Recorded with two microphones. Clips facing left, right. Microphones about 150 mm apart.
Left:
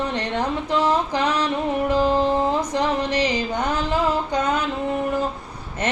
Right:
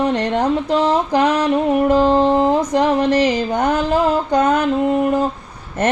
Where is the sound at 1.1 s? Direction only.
50° right (ahead or behind).